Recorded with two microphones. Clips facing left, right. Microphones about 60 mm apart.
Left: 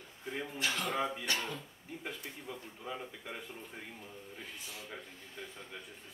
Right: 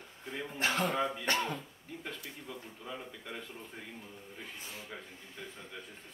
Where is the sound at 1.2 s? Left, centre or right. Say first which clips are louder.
Right 4 dB; right.